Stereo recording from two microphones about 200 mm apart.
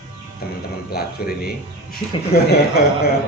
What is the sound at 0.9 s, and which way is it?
A man's voice, 50° left (ahead or behind).